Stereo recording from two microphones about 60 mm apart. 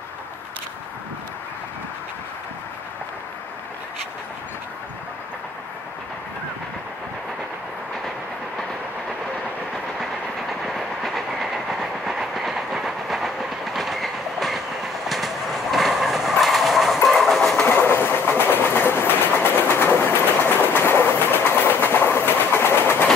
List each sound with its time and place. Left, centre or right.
9.9 s train: centre
17.6 s train: left